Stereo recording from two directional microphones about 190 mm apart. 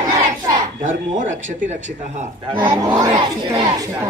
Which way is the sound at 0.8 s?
40° right (ahead or behind).